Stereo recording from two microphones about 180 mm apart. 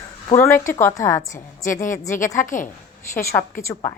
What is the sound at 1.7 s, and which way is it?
Speech, 45° left (ahead or behind).